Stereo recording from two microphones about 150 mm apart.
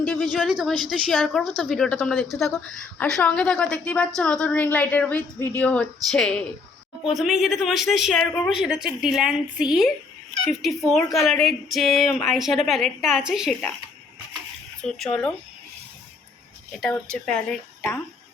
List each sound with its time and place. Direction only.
0.0 s a woman's voice: 5° left (ahead or behind)
14.8 s speech: 5° left (ahead or behind)
16.8 s speech: 5° left (ahead or behind)